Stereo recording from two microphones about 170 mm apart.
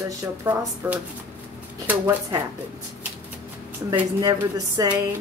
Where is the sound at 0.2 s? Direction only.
10° right (ahead or behind).